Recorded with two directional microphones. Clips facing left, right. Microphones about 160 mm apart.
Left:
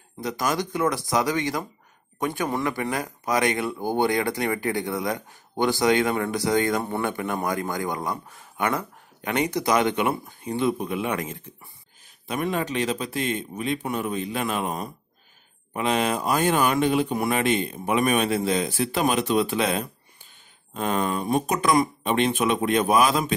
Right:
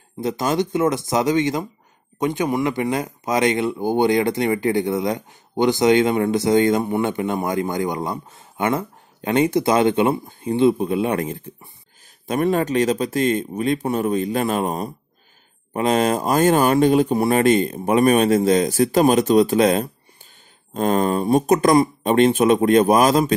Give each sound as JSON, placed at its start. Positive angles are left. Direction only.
{"t": 0.2, "sound": "speech", "side_deg": -25}